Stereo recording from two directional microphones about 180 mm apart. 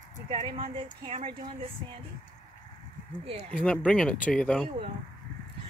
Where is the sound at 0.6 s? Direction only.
30° right (ahead or behind).